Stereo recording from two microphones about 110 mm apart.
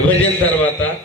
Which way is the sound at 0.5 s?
15° left (ahead or behind).